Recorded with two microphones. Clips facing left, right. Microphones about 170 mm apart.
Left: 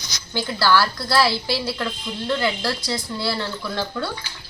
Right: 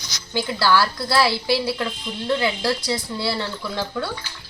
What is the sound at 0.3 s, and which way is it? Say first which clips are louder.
A woman's voice: even; 15° right (ahead or behind).